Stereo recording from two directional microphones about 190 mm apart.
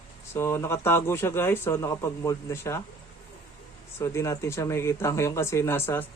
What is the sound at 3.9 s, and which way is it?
Speech, 15° left (ahead or behind).